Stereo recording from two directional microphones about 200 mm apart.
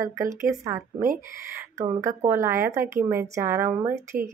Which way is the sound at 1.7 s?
15° right (ahead or behind).